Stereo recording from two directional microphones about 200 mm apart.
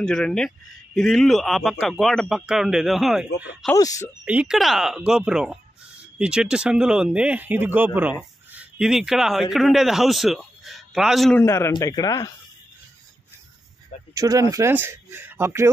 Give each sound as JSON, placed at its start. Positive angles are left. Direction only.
{"t": 0.0, "sound": "speech", "side_deg": 5}
{"t": 3.7, "sound": "speech", "side_deg": 15}
{"t": 4.2, "sound": "speech", "side_deg": -5}
{"t": 11.4, "sound": "speech", "side_deg": 15}
{"t": 14.1, "sound": "speech", "side_deg": -15}